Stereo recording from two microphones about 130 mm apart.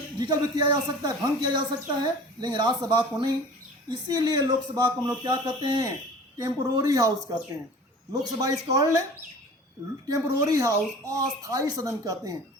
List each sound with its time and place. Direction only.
0.2 s a child's voice: 30° right (ahead or behind)
8.1 s a child's voice: 25° right (ahead or behind)
10.1 s a child's voice: 25° right (ahead or behind)